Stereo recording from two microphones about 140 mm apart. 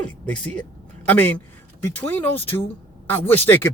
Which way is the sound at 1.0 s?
10° left (ahead or behind).